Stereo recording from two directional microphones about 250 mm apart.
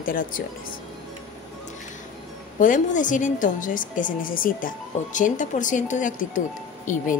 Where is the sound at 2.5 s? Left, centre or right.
Left.